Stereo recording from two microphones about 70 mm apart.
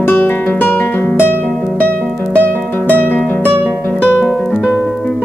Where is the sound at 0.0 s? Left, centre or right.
Left.